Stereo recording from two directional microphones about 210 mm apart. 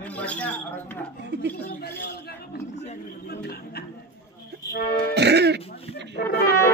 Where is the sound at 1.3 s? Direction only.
55° right (ahead or behind).